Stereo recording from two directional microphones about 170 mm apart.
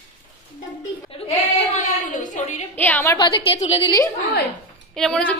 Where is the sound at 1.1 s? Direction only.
40° left (ahead or behind).